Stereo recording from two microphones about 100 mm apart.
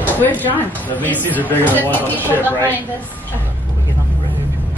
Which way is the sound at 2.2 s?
20° right (ahead or behind).